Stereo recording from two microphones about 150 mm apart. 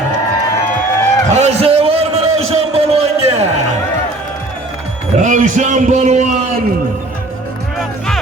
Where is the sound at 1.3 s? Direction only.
45° right (ahead or behind).